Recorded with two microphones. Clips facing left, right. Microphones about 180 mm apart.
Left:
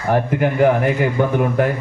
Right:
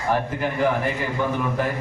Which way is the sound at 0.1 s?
55° left (ahead or behind).